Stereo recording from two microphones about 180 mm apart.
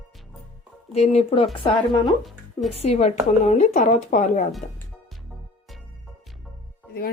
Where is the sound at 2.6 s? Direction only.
35° left (ahead or behind).